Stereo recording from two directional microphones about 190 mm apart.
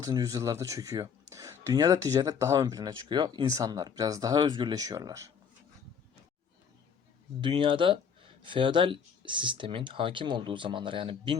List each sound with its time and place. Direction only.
0.0 s speech: 20° right (ahead or behind)
7.4 s speech: 25° right (ahead or behind)